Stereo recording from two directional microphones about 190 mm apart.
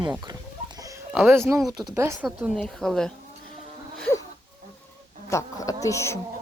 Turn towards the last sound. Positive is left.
turn(degrees=15)  # may be behind; listen again after turning